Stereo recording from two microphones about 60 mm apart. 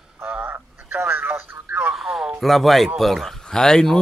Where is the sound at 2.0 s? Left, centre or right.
Centre.